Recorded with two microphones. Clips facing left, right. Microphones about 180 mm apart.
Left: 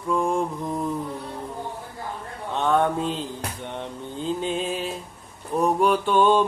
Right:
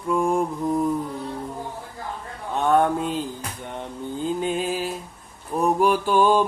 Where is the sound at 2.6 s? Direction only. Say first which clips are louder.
Right 2 dB; 5° right (ahead or behind).